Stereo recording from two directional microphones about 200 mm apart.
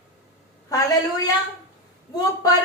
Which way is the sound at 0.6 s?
20° left (ahead or behind).